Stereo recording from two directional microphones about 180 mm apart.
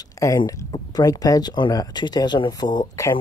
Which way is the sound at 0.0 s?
15° left (ahead or behind).